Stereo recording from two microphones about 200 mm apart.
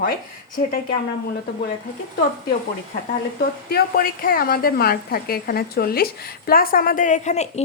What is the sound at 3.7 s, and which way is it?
A woman's voice, 45° left (ahead or behind).